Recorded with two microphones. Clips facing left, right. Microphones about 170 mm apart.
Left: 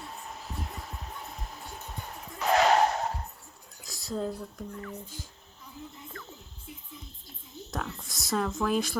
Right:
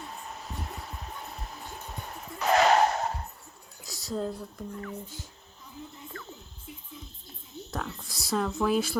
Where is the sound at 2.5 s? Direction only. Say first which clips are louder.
Right 1 dB; 65° right (ahead or behind).